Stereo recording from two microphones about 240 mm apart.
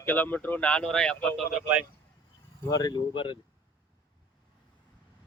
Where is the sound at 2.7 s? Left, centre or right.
Centre.